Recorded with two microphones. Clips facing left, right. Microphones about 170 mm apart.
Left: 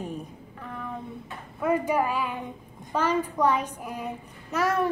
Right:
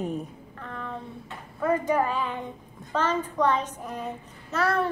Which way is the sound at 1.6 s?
10° left (ahead or behind).